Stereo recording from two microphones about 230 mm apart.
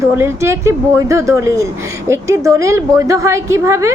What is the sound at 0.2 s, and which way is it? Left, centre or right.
A woman's voice, centre.